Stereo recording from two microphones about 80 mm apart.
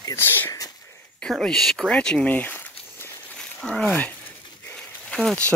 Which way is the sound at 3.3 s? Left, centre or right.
Centre.